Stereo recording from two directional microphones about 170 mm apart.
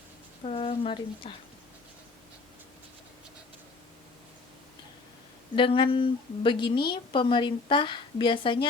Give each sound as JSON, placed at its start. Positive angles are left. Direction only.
{"t": 0.4, "sound": "speech", "side_deg": 35}
{"t": 5.5, "sound": "a woman's voice", "side_deg": 30}